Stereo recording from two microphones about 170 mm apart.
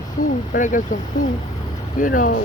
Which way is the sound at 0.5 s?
50° left (ahead or behind).